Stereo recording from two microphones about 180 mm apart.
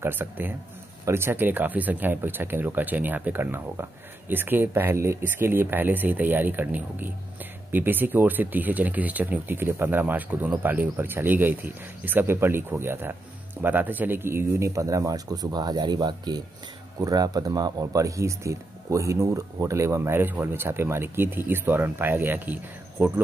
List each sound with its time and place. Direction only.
0.0 s speech: 10° right (ahead or behind)